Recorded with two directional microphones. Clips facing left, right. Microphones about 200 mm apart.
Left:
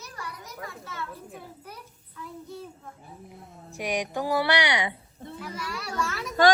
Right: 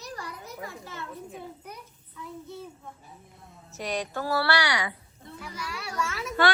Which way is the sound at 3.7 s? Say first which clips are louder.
Left 2 dB; 15° left (ahead or behind).